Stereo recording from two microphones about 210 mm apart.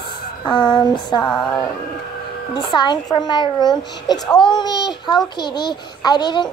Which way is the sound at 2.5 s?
20° left (ahead or behind).